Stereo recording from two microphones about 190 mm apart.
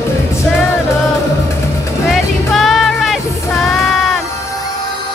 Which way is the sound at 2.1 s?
Centre (ahead or behind).